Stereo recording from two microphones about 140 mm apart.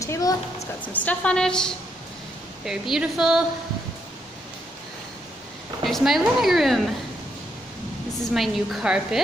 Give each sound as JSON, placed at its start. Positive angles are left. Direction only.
{"t": 0.0, "sound": "a sound", "side_deg": 25}
{"t": 0.9, "sound": "a woman's voice", "side_deg": 10}
{"t": 5.9, "sound": "a woman's voice", "side_deg": 0}
{"t": 8.3, "sound": "a woman's voice", "side_deg": 0}